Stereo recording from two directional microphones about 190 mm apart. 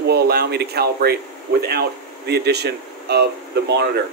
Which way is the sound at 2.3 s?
60° right (ahead or behind).